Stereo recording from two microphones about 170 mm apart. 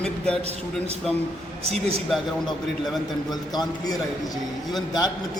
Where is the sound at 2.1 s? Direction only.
Centre (ahead or behind).